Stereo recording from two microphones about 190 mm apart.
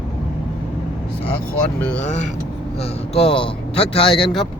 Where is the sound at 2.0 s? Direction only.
40° left (ahead or behind).